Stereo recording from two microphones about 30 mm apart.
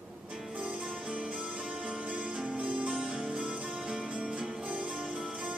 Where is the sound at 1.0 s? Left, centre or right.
Right.